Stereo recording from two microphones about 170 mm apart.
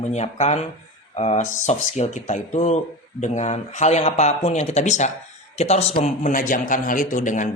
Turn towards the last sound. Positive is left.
turn(degrees=50)  # may be behind; listen again after turning